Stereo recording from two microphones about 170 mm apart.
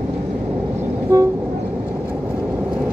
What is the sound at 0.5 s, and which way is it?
Vehicle, 15° right (ahead or behind).